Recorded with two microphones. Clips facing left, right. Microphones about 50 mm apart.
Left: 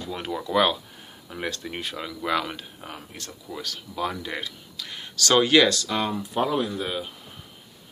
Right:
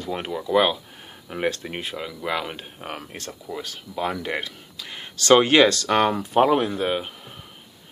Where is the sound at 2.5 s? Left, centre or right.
Right.